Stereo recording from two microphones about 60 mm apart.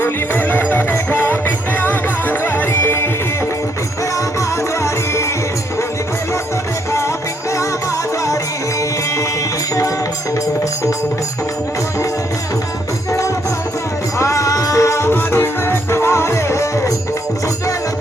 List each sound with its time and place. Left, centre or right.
0.0 s music: left
14.2 s music: left